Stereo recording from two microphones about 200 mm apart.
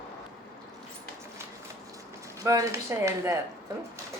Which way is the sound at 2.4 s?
15° right (ahead or behind).